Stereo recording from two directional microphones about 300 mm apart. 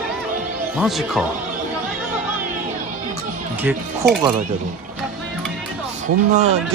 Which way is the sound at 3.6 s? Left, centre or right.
Centre.